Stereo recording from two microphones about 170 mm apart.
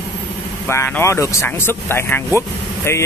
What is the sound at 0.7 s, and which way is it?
Speech, 15° left (ahead or behind).